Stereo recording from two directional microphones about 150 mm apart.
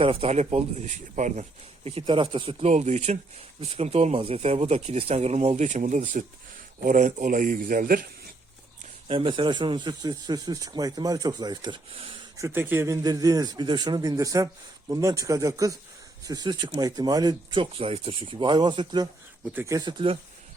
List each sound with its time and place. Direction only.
0.0 s speech: 40° right (ahead or behind); by 8.0 s 65° right (ahead or behind)
9.0 s a man's voice: 35° right (ahead or behind)
12.4 s a man's voice: 15° right (ahead or behind); by 20.1 s 35° right (ahead or behind)